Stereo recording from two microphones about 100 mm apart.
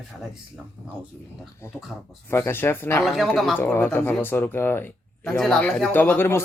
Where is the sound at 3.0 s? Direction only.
Centre (ahead or behind).